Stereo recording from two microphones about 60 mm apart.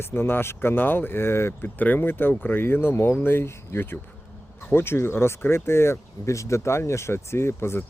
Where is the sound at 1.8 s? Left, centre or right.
Left.